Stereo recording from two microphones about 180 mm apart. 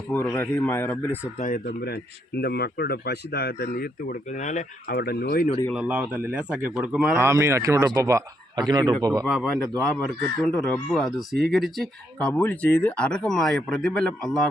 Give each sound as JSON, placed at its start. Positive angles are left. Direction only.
{"t": 0.1, "sound": "speech", "side_deg": 15}
{"t": 1.4, "sound": "speech", "side_deg": 50}
{"t": 4.9, "sound": "speech", "side_deg": 60}
{"t": 5.7, "sound": "a man's voice", "side_deg": -5}
{"t": 7.2, "sound": "a man's voice", "side_deg": -15}
{"t": 9.2, "sound": "speech", "side_deg": 0}